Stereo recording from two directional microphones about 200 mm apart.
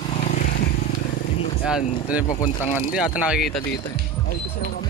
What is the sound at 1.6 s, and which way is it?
Speech, 5° right (ahead or behind).